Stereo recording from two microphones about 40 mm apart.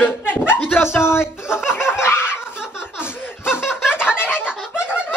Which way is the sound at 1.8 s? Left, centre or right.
Left.